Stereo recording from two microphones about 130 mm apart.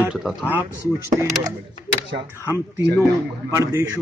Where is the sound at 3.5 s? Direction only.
25° right (ahead or behind).